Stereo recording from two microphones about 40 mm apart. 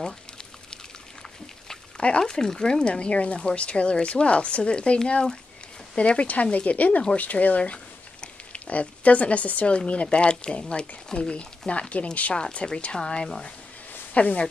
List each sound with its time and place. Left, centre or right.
2.0 s speech: left
14.1 s speech: left